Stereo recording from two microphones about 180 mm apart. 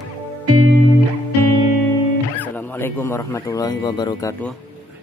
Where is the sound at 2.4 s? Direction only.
10° left (ahead or behind).